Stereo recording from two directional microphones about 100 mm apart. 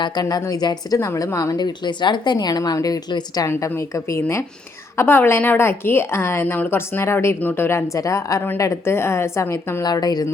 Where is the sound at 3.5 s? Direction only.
25° left (ahead or behind).